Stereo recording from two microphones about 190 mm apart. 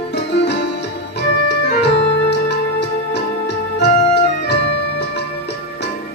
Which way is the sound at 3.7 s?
60° left (ahead or behind).